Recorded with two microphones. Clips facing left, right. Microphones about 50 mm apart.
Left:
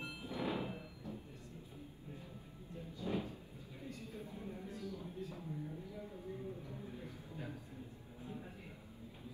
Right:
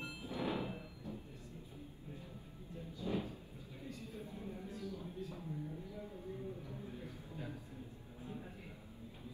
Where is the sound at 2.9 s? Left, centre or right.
Left.